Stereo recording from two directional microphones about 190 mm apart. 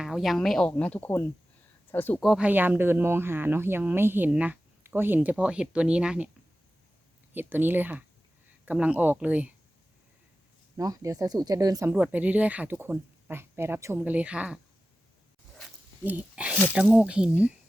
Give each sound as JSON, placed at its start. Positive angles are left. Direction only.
{"t": 0.0, "sound": "speech", "side_deg": 0}
{"t": 2.2, "sound": "speech", "side_deg": -5}
{"t": 7.3, "sound": "speech", "side_deg": -10}
{"t": 10.8, "sound": "speech", "side_deg": -20}
{"t": 11.9, "sound": "speech", "side_deg": -5}
{"t": 15.5, "sound": "a sound", "side_deg": -5}
{"t": 16.7, "sound": "speech", "side_deg": -5}